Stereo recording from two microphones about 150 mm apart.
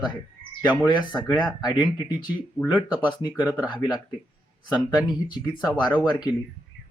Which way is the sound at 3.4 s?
10° right (ahead or behind).